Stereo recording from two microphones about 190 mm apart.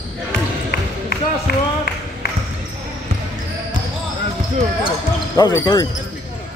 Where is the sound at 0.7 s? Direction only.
55° left (ahead or behind).